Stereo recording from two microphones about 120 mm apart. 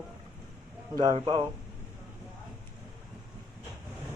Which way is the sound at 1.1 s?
45° right (ahead or behind).